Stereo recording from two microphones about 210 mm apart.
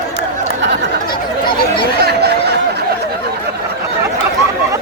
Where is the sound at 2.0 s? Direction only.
50° right (ahead or behind).